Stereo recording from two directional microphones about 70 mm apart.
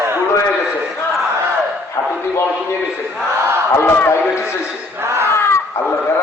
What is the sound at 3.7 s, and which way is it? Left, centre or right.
Speech, left.